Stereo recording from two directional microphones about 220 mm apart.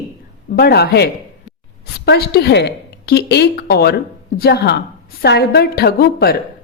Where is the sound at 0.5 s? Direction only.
45° left (ahead or behind).